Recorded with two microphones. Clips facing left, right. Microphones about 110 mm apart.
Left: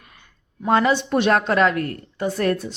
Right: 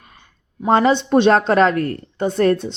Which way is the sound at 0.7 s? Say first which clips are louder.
Right 4 dB; 30° right (ahead or behind).